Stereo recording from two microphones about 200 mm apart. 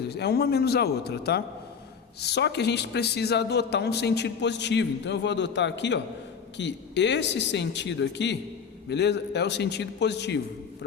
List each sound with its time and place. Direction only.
0.1 s a man's voice: 55° left (ahead or behind)